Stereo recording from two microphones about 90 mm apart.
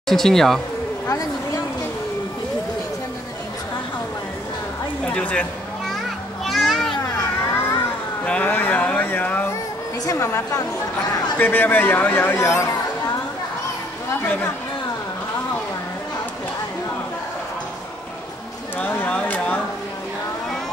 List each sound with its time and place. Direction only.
0.1 s speech: 5° left (ahead or behind)
1.0 s a sound: 40° left (ahead or behind)
5.0 s speech: 15° left (ahead or behind)
6.4 s children playing: centre (ahead or behind)
8.3 s a sound: 15° left (ahead or behind)
10.0 s a woman's voice: 35° left (ahead or behind)
11.3 s a man's voice: 20° left (ahead or behind)
14.2 s a man's voice: 20° left (ahead or behind)
18.8 s a sound: 15° left (ahead or behind)